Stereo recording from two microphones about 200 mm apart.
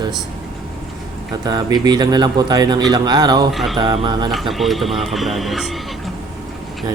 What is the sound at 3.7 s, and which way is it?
Speech, 25° right (ahead or behind).